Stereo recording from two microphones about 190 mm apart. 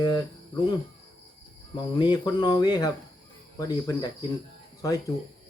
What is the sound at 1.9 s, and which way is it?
Speech, 25° left (ahead or behind).